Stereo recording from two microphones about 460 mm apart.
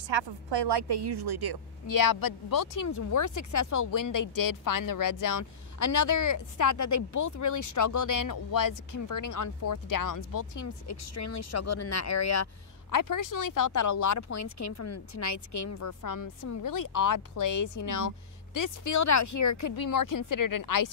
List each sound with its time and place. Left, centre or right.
0.1 s a woman's voice: right
1.9 s speech: left